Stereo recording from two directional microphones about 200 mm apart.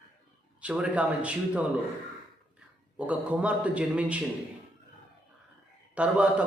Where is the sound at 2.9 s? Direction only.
5° right (ahead or behind).